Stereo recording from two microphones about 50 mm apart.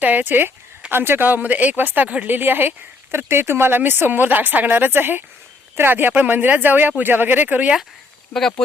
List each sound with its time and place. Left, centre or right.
0.0 s a man's voice: right
1.3 s speech: right
8.3 s speech: centre